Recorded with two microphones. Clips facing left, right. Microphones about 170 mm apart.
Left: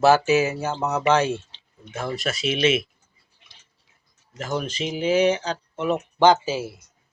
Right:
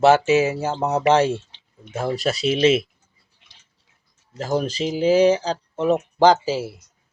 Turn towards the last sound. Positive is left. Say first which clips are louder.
# right 2 dB
turn(degrees=-35)  # may be behind; listen again after turning